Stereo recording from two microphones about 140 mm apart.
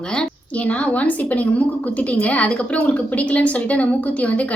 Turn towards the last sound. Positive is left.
turn(degrees=10)  # may be behind; listen again after turning